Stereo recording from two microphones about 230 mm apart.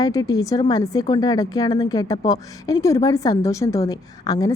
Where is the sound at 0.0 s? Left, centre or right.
Centre.